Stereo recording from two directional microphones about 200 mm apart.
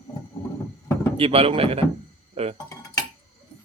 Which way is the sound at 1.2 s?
30° right (ahead or behind).